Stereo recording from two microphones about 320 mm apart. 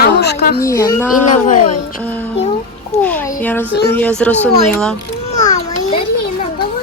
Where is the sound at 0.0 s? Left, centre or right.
Left.